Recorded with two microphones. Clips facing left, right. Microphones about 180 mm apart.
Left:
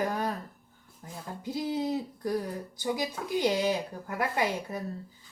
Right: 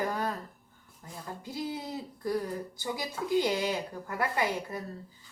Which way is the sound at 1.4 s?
20° left (ahead or behind).